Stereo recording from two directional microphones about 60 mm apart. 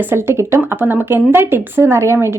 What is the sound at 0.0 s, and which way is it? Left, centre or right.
A woman's voice, right.